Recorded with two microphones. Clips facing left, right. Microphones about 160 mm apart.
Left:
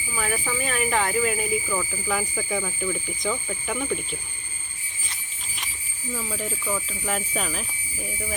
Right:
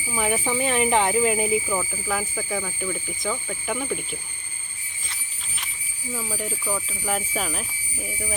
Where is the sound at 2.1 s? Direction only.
Centre (ahead or behind).